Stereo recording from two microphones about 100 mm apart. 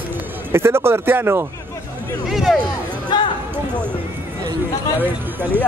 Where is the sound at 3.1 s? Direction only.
45° left (ahead or behind).